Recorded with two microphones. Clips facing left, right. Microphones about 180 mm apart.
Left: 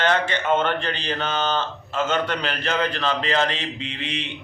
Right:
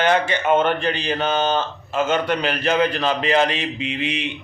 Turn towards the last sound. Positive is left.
turn(degrees=-10)  # may be behind; listen again after turning